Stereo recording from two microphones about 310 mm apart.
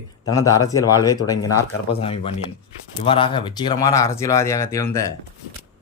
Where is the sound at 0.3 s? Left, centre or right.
Centre.